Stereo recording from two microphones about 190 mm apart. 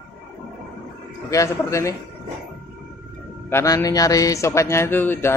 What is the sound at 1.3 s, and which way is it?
Speech, 15° left (ahead or behind).